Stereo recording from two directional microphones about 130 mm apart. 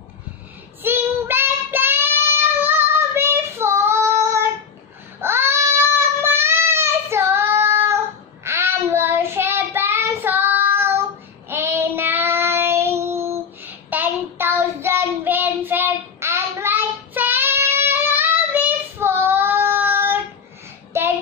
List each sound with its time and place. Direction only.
0.8 s child singing: 20° right (ahead or behind)
5.2 s a sound: 20° right (ahead or behind)
8.5 s child singing: 20° right (ahead or behind)